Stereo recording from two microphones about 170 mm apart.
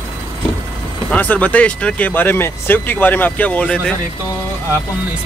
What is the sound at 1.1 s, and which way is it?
Speech, 10° left (ahead or behind).